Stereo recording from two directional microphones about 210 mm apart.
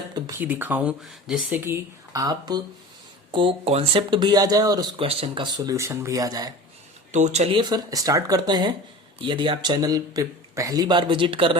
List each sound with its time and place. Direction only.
0.1 s speech: 10° right (ahead or behind)
7.1 s speech: 35° right (ahead or behind)